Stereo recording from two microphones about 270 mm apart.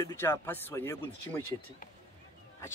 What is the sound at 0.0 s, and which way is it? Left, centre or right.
A man's voice, centre.